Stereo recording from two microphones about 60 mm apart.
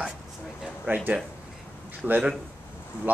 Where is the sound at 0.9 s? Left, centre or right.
Right.